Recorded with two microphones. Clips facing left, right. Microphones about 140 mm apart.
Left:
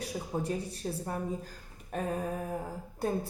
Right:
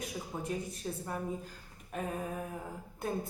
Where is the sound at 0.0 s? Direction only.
35° left (ahead or behind).